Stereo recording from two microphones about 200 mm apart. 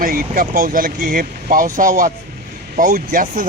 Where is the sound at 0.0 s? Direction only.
45° right (ahead or behind).